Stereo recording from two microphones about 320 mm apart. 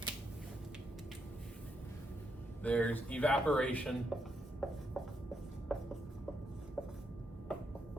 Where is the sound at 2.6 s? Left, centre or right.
Centre.